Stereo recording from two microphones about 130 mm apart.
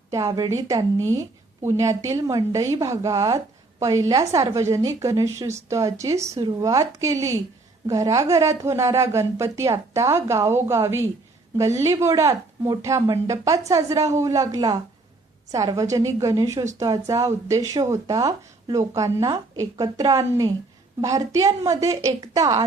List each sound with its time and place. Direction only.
0.1 s a woman's voice: 30° right (ahead or behind)